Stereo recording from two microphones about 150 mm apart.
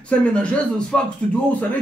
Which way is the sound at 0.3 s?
5° left (ahead or behind).